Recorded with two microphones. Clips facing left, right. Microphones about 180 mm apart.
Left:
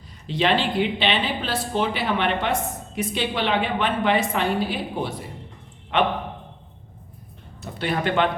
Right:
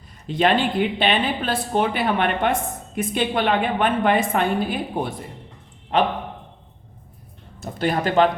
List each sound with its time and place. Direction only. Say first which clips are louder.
0.3 s speech: right 2 dB; 50° right (ahead or behind)
5.9 s speech: right 2 dB; 40° right (ahead or behind)
7.6 s speech: right 3 dB; 45° right (ahead or behind)